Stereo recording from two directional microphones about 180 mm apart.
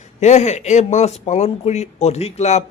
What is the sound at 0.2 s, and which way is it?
Speech, 40° left (ahead or behind).